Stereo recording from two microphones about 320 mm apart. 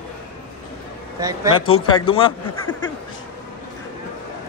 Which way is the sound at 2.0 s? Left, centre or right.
Centre.